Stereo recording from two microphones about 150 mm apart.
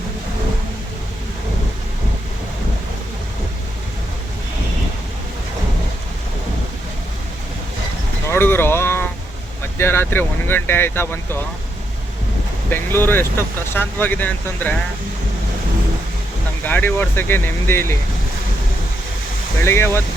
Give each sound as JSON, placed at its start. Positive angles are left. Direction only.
{"t": 8.3, "sound": "a sound", "side_deg": 15}
{"t": 9.7, "sound": "speech", "side_deg": 15}
{"t": 12.7, "sound": "speech", "side_deg": 15}
{"t": 16.6, "sound": "speech", "side_deg": 10}
{"t": 19.6, "sound": "speech", "side_deg": 15}